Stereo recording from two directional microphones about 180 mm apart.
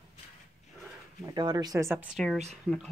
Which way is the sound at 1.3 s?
25° right (ahead or behind).